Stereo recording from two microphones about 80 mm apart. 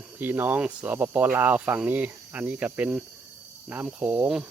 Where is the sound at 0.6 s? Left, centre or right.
Centre.